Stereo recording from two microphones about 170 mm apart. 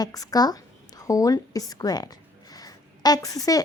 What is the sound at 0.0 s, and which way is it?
A woman's voice, 20° left (ahead or behind).